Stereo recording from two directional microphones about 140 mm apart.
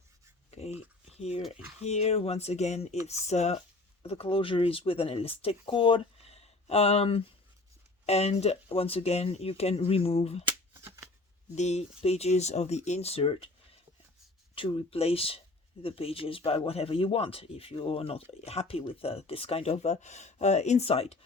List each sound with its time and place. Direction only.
0.5 s a sound: 45° left (ahead or behind)
1.1 s dog: 50° left (ahead or behind)
1.4 s speech: centre (ahead or behind)
1.8 s speech: 50° left (ahead or behind)
10.8 s shuffling cards: 20° right (ahead or behind)
11.5 s speech: 55° left (ahead or behind)
14.5 s speech: 40° left (ahead or behind)